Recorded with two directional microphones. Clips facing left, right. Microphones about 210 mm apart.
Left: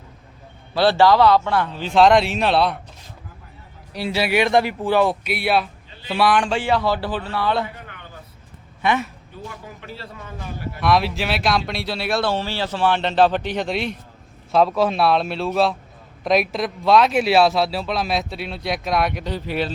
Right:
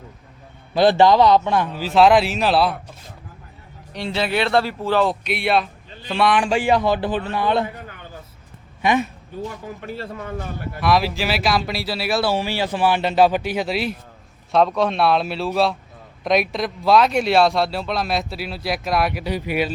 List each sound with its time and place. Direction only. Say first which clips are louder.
0.7 s a man's voice: right 1 dB; 20° right (ahead or behind); by 2.7 s centre (ahead or behind)
3.9 s speech: left 2 dB; 10° left (ahead or behind)
6.4 s speech: right 2 dB; 10° right (ahead or behind)
8.8 s a man's voice: right 2 dB; 15° right (ahead or behind)
9.8 s a man's voice: right 8 dB; 50° right (ahead or behind)
10.8 s speech: even; centre (ahead or behind)